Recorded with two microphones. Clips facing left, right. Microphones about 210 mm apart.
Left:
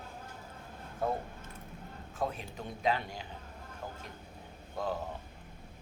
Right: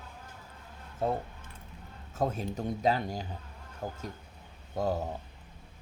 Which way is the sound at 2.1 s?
40° right (ahead or behind).